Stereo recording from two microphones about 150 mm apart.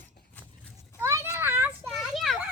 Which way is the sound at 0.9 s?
15° right (ahead or behind).